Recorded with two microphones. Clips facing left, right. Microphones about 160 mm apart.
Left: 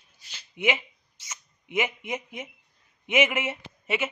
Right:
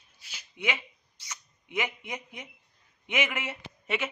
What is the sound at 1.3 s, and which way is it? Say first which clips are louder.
Speech: left 3 dB; 20° left (ahead or behind).